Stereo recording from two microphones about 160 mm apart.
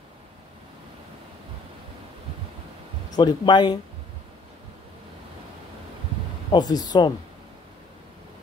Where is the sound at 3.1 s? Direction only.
25° left (ahead or behind).